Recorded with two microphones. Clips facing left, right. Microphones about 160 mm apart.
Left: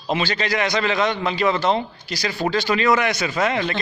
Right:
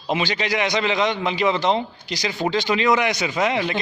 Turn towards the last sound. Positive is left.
turn(degrees=-15)  # may be behind; listen again after turning